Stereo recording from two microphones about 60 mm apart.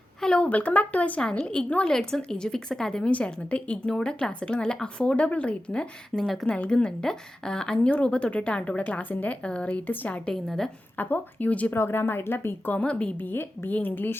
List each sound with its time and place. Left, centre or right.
0.2 s a sound: centre
0.4 s a woman's voice: left
3.1 s speech: left
6.2 s a woman's voice: centre
6.5 s a woman's voice: centre
10.2 s speech: centre
10.9 s a woman's voice: left
11.7 s speech: left
12.7 s a woman's voice: centre
13.3 s speech: left